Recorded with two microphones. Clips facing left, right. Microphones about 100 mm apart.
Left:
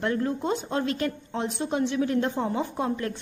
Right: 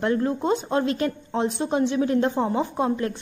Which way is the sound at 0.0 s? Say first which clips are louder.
Right 4 dB; 30° right (ahead or behind).